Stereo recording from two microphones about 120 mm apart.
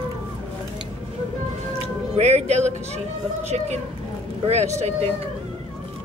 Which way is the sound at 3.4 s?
70° right (ahead or behind).